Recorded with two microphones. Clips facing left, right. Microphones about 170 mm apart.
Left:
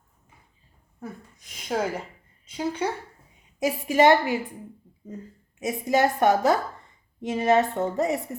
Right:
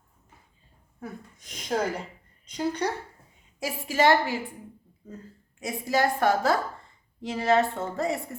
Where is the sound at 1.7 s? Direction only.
5° left (ahead or behind).